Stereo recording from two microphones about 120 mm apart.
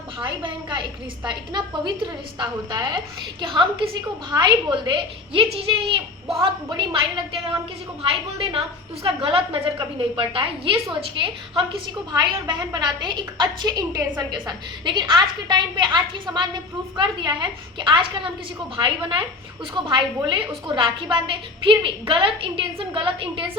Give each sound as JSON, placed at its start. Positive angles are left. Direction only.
{"t": 0.2, "sound": "a woman's voice", "side_deg": -45}
{"t": 8.0, "sound": "a woman's voice", "side_deg": -50}
{"t": 12.1, "sound": "a woman's voice", "side_deg": -35}
{"t": 19.7, "sound": "a woman's voice", "side_deg": -40}